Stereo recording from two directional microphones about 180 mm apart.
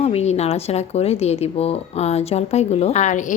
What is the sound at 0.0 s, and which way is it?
A woman's voice, 35° left (ahead or behind).